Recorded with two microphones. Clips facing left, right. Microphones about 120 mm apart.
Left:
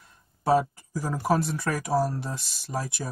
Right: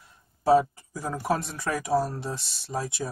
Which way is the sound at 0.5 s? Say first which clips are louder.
Right 2 dB; centre (ahead or behind).